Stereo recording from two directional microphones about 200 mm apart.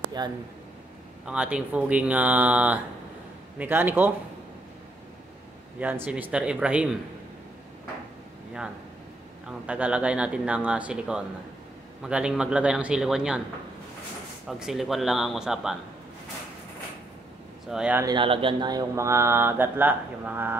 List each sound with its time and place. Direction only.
0.2 s speech: 20° right (ahead or behind)
1.2 s speech: 5° right (ahead or behind)
5.8 s speech: 10° right (ahead or behind)
9.7 s speech: 5° right (ahead or behind)
14.5 s speech: centre (ahead or behind)
17.6 s speech: 5° right (ahead or behind)
18.0 s speech: 25° right (ahead or behind)